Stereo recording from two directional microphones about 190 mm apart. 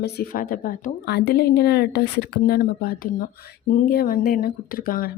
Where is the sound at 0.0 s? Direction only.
50° left (ahead or behind).